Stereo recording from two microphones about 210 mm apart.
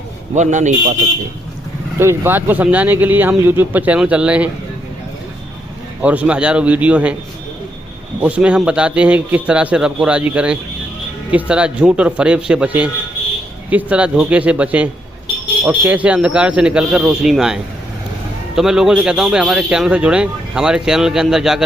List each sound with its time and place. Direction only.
0.3 s a man's voice: 35° right (ahead or behind)
2.0 s speech: 10° right (ahead or behind)
6.0 s speech: 5° right (ahead or behind)
8.2 s a man's voice: 5° right (ahead or behind)